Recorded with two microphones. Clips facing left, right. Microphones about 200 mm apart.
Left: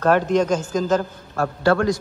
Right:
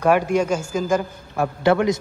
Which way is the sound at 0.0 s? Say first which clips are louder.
Even; 10° right (ahead or behind).